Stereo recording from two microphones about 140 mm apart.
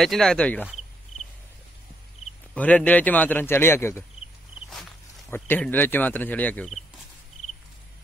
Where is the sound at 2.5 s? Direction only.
10° left (ahead or behind).